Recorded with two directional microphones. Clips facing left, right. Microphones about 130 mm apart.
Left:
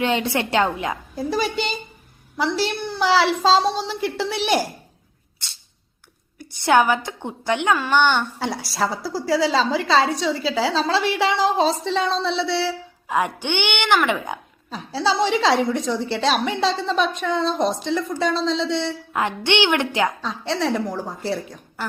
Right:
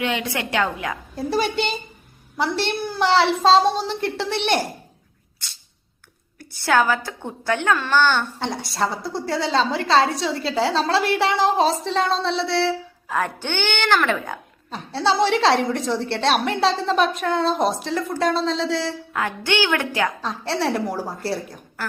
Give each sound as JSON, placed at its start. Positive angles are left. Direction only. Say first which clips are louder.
{"t": 0.0, "sound": "a woman's voice", "louder": "left 3 dB", "side_deg": 30}
{"t": 1.1, "sound": "a woman's voice", "louder": "right 2 dB", "side_deg": 0}
{"t": 6.5, "sound": "a woman's voice", "louder": "left 2 dB", "side_deg": 20}
{"t": 8.4, "sound": "a woman's voice", "louder": "even", "side_deg": 5}
{"t": 13.1, "sound": "speech", "louder": "left 2 dB", "side_deg": 15}
{"t": 14.7, "sound": "a woman's voice", "louder": "right 1 dB", "side_deg": 0}
{"t": 19.1, "sound": "a woman's voice", "louder": "left 2 dB", "side_deg": 20}
{"t": 20.2, "sound": "a woman's voice", "louder": "even", "side_deg": 0}